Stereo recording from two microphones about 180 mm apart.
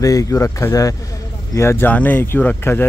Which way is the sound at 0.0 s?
20° left (ahead or behind).